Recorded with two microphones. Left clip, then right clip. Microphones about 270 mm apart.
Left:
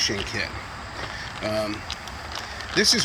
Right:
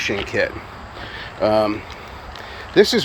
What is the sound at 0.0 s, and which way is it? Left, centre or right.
Speech, centre.